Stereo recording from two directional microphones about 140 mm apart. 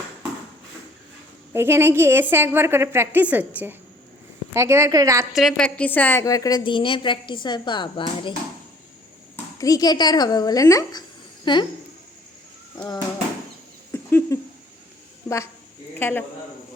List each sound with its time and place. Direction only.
1.5 s a woman's voice: 15° right (ahead or behind)
5.3 s a woman's voice: centre (ahead or behind); by 8.3 s 35° left (ahead or behind)
9.3 s a woman's voice: 25° left (ahead or behind)
12.7 s a sound: 30° left (ahead or behind)
13.9 s owl: 15° left (ahead or behind)
16.0 s a man's voice: 15° left (ahead or behind)